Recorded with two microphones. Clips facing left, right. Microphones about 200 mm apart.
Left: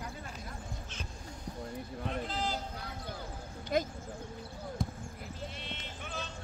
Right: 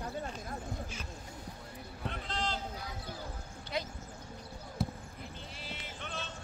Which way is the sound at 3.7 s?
50° left (ahead or behind).